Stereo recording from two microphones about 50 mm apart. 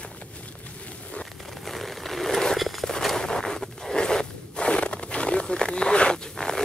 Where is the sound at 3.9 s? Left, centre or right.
Centre.